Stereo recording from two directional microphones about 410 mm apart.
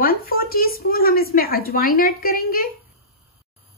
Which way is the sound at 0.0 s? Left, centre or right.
Left.